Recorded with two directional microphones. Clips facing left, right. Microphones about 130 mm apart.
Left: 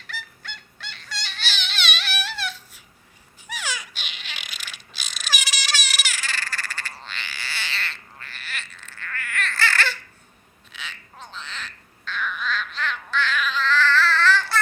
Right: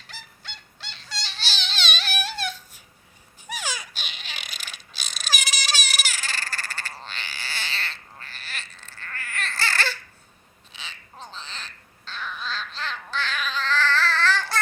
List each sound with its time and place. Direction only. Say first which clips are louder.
0.1 s honk: left 6 dB; 30° right (ahead or behind)
3.4 s a sound: even; 45° right (ahead or behind)
10.8 s frog: left 2 dB; 35° right (ahead or behind)